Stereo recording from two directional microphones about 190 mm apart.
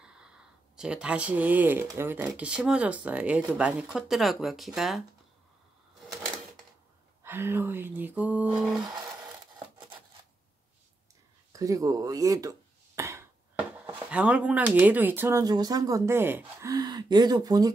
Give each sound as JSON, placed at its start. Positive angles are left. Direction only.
{"t": 0.0, "sound": "a sound", "side_deg": -5}
{"t": 0.7, "sound": "speech", "side_deg": -5}
{"t": 7.2, "sound": "speech", "side_deg": -10}
{"t": 11.5, "sound": "chop", "side_deg": -20}
{"t": 13.7, "sound": "speech", "side_deg": -10}